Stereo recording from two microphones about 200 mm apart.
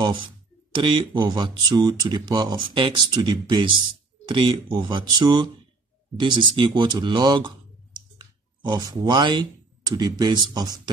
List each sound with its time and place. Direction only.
0.7 s speech: 25° right (ahead or behind)